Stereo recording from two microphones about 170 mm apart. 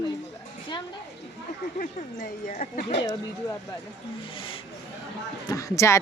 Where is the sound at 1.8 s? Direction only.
45° left (ahead or behind).